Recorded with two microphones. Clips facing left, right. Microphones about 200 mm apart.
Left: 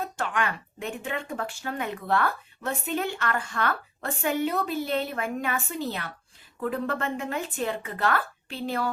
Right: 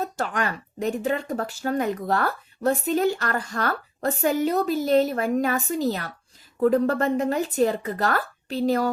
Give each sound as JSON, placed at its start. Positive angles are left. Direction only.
{"t": 0.0, "sound": "speech", "side_deg": -40}